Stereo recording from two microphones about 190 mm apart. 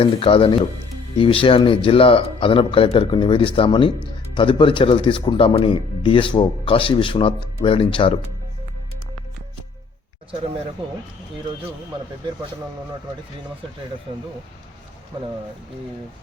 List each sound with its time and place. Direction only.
0.0 s speech: 30° left (ahead or behind)